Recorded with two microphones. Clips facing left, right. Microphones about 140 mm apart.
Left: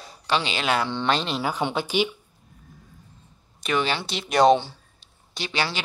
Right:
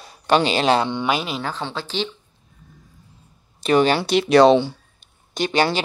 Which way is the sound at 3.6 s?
40° right (ahead or behind).